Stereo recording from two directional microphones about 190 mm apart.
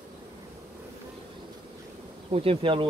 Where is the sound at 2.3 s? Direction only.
30° right (ahead or behind).